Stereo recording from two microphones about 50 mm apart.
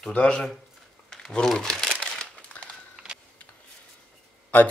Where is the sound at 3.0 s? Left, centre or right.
Centre.